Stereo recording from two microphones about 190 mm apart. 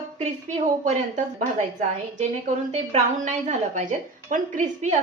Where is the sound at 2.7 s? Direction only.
40° right (ahead or behind).